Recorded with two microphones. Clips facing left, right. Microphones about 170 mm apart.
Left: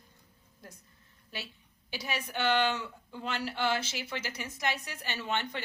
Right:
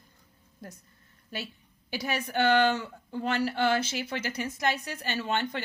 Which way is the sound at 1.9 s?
45° right (ahead or behind).